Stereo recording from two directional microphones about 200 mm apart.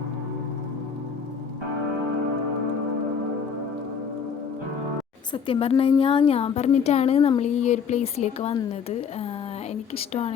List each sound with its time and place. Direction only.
5.3 s a woman's voice: 25° left (ahead or behind)
10.1 s speech: 35° left (ahead or behind)